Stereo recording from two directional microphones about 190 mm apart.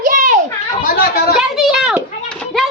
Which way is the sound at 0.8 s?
55° left (ahead or behind).